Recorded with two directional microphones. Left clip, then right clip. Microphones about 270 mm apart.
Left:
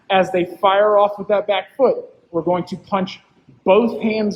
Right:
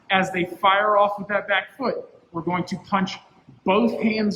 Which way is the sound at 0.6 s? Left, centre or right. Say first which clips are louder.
Left 4 dB; right.